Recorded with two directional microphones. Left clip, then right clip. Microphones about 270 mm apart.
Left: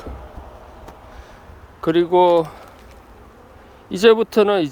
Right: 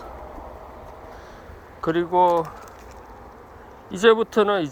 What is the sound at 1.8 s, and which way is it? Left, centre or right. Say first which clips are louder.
Speech: left 4 dB; left.